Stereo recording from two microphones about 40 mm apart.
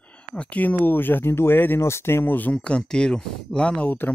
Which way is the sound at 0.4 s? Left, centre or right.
Left.